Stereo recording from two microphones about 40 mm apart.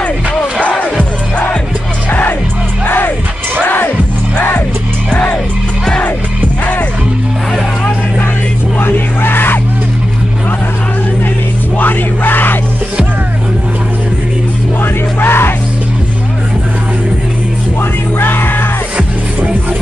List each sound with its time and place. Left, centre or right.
0.6 s music: left
2.0 s music: left
3.6 s music: left
5.1 s music: left
8.7 s music: left
11.8 s music: left
15.1 s music: left
18.2 s music: left